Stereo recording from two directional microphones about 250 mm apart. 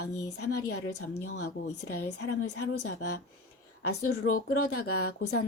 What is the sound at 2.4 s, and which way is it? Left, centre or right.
A woman's voice, left.